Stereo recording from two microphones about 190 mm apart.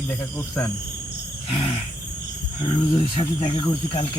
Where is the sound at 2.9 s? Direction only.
25° left (ahead or behind).